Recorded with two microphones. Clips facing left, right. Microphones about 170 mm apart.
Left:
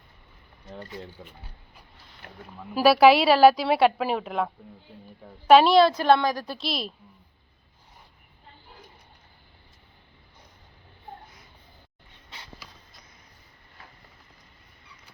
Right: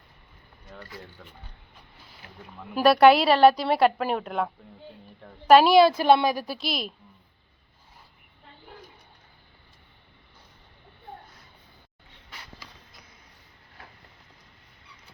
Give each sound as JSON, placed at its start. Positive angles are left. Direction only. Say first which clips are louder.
{"t": 0.6, "sound": "speech", "louder": "left 4 dB", "side_deg": 20}
{"t": 2.2, "sound": "speech", "louder": "left 4 dB", "side_deg": 55}
{"t": 2.6, "sound": "a woman's voice", "louder": "even", "side_deg": 5}